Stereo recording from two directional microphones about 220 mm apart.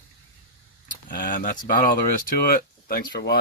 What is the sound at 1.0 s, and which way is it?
Speech, 40° left (ahead or behind).